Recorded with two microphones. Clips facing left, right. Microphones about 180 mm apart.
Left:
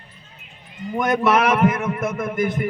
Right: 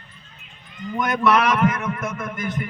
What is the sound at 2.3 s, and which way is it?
Speech, 10° left (ahead or behind).